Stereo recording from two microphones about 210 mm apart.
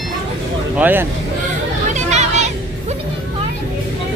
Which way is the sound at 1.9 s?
30° right (ahead or behind).